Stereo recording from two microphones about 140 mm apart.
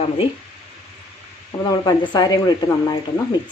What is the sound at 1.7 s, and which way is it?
Speech, 30° left (ahead or behind).